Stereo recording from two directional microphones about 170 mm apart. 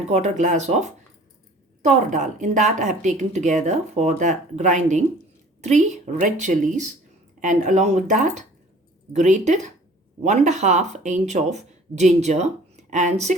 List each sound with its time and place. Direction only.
0.1 s a woman's voice: 45° right (ahead or behind)